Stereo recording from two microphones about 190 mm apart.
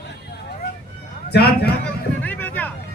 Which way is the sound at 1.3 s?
55° left (ahead or behind).